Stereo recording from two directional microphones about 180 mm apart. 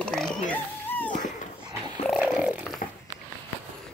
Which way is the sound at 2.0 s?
5° right (ahead or behind).